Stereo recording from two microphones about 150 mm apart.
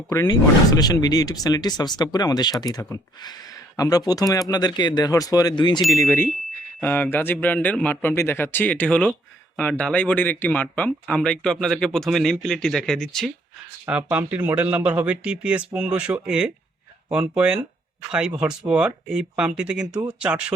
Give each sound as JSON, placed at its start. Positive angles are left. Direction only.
{"t": 0.1, "sound": "speech", "side_deg": 25}
{"t": 6.7, "sound": "speech", "side_deg": 10}
{"t": 13.8, "sound": "speech", "side_deg": -10}
{"t": 18.7, "sound": "speech", "side_deg": -5}